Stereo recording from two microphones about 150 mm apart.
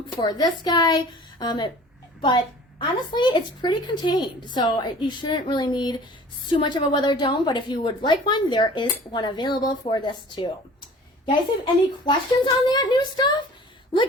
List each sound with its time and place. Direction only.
0.2 s a woman's voice: 25° left (ahead or behind)